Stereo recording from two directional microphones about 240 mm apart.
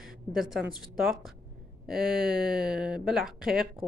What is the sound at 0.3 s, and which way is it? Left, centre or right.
Speech, centre.